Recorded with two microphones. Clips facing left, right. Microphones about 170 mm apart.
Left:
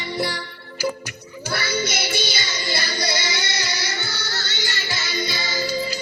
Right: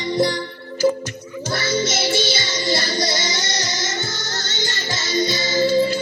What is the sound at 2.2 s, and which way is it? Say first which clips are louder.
Music: right 5 dB; 50° right (ahead or behind).